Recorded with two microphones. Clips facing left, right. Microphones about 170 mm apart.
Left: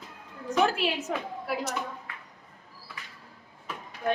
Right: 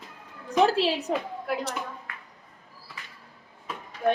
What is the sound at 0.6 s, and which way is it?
Speech, 35° right (ahead or behind).